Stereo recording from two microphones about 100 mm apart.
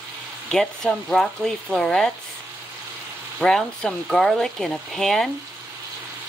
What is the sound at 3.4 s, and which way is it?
Speech, 5° left (ahead or behind).